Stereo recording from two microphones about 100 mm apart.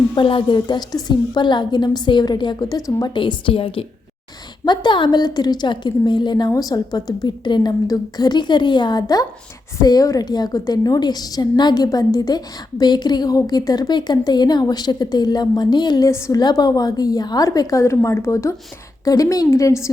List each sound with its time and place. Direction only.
0.2 s a woman's voice: 55° left (ahead or behind); by 3.1 s 40° left (ahead or behind)
3.2 s a woman's voice: 55° left (ahead or behind)
4.6 s a woman's voice: 50° left (ahead or behind)
16.0 s a woman's voice: 30° left (ahead or behind)
16.4 s a woman's voice: 45° left (ahead or behind)